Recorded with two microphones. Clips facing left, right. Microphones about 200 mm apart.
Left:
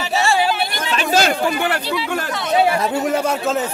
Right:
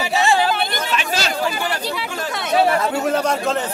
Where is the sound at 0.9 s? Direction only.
50° left (ahead or behind).